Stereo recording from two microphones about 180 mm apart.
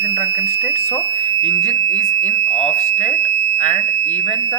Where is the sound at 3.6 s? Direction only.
40° left (ahead or behind).